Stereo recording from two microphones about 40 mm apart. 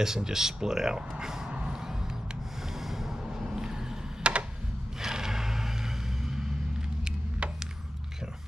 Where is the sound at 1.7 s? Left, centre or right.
Centre.